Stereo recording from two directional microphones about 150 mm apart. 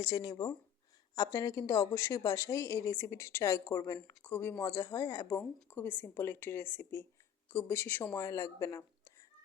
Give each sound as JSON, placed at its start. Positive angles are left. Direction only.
{"t": 0.0, "sound": "speech", "side_deg": 25}